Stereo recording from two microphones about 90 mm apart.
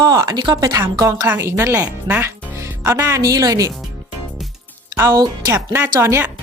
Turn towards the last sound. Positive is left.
turn(degrees=-25)  # may be behind; listen again after turning